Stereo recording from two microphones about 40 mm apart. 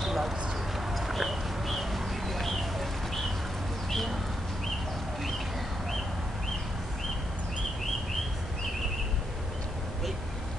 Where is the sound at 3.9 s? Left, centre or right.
Centre.